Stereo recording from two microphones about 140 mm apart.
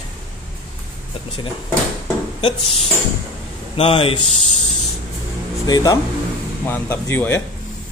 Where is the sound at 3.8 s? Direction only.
40° left (ahead or behind).